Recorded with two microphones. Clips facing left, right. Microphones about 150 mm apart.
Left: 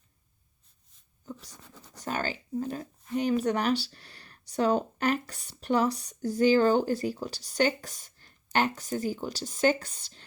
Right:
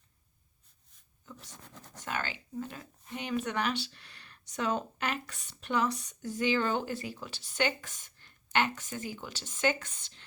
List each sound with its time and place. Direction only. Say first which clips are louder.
1.2 s writing: left 7 dB; 35° left (ahead or behind)
2.0 s speech: left 5 dB; 40° left (ahead or behind)